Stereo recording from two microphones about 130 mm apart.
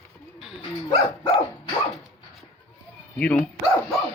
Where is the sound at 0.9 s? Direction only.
30° left (ahead or behind).